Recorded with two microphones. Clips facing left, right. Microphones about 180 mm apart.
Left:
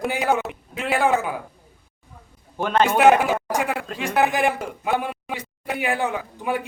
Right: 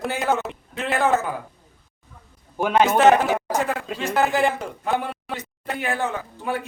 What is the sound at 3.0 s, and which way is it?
Speech, 10° left (ahead or behind).